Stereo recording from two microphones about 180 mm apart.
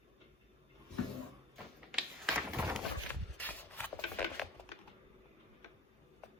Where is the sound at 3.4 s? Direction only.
10° left (ahead or behind).